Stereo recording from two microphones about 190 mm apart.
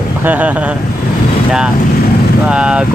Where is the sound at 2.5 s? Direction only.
5° right (ahead or behind).